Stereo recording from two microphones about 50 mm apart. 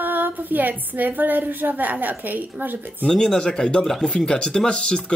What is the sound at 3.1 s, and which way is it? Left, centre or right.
Speech, centre.